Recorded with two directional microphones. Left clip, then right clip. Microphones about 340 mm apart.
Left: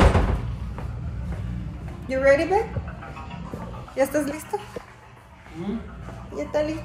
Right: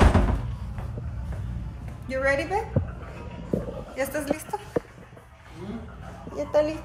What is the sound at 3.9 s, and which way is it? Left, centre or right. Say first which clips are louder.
Speech: left 5 dB; centre.